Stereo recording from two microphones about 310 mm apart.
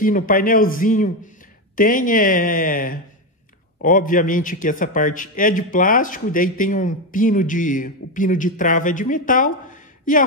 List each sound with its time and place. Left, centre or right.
0.0 s a man's voice: left